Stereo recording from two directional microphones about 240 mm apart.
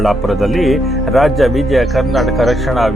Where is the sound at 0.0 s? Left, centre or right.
Centre.